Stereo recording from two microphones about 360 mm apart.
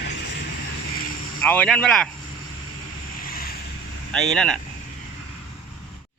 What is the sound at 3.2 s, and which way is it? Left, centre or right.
Waves, left.